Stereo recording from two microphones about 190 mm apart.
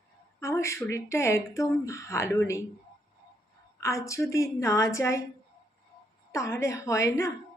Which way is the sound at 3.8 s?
15° left (ahead or behind).